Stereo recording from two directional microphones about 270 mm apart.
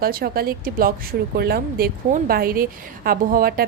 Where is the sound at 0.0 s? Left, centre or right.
Right.